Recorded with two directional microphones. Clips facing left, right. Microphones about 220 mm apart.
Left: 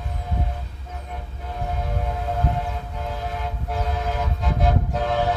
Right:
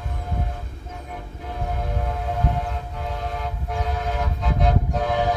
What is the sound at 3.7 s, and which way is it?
Vehicle, centre (ahead or behind).